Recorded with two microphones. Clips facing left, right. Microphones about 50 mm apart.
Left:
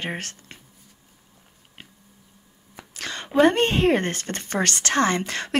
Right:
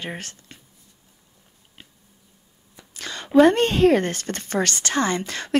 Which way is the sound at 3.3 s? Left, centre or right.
Left.